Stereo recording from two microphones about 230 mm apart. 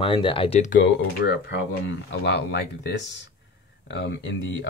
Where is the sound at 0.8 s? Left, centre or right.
Left.